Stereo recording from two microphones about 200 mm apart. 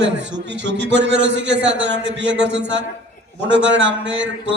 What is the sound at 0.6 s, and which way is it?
A man's voice, 60° right (ahead or behind).